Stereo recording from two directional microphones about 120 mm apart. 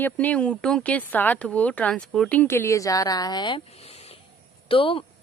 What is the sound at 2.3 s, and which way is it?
Speech, 15° left (ahead or behind).